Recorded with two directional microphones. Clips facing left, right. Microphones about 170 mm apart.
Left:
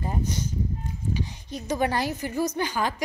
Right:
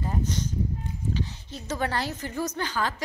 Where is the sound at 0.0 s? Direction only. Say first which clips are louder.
Even; 15° left (ahead or behind).